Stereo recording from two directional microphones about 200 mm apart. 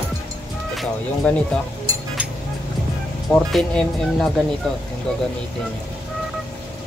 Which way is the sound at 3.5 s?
5° left (ahead or behind).